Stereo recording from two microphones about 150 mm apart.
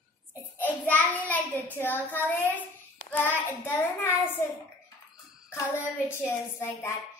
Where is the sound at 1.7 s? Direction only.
10° left (ahead or behind).